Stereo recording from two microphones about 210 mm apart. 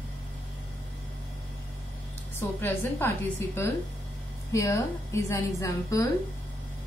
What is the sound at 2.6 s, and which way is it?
A woman's voice, 10° left (ahead or behind).